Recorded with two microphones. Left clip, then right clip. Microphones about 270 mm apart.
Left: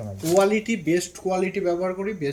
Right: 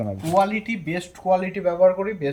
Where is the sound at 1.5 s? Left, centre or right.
Right.